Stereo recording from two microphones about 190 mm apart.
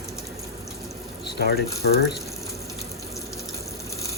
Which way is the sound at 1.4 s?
55° left (ahead or behind).